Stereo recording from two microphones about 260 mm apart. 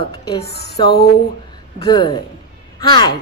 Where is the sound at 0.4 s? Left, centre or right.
Left.